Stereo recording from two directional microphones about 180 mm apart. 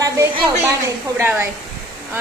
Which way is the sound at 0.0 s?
20° right (ahead or behind).